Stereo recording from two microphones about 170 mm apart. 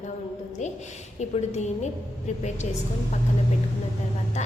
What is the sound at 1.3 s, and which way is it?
Speech, 40° left (ahead or behind).